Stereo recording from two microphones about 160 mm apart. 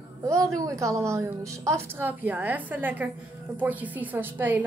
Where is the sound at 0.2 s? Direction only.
20° right (ahead or behind).